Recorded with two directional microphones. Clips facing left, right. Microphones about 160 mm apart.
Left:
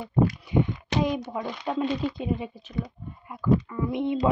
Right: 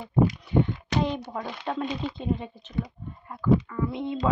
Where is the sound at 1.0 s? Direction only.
10° left (ahead or behind).